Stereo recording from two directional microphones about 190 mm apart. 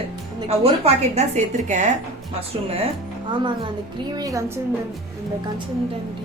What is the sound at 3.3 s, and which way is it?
A woman's voice, 25° right (ahead or behind).